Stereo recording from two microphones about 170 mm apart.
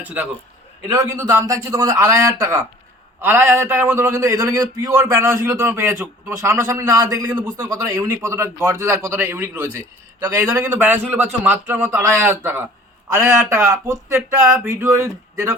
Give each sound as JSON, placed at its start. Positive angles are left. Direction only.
{"t": 0.0, "sound": "a man's voice", "side_deg": -10}